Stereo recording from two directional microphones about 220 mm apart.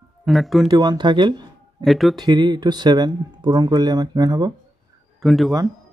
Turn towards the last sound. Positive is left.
turn(degrees=0)  # may be behind; listen again after turning